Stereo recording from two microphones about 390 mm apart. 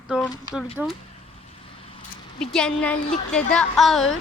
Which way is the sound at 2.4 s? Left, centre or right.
Centre.